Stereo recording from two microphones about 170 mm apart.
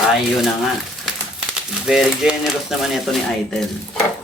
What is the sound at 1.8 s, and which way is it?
Speech, 5° right (ahead or behind).